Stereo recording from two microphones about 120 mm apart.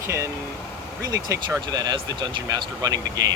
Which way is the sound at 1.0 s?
30° right (ahead or behind).